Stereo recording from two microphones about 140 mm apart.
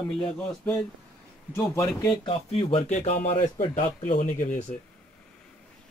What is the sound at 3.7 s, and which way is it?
Speech, 65° left (ahead or behind).